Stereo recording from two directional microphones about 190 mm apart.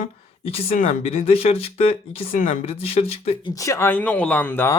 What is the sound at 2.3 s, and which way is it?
Speech, 45° left (ahead or behind).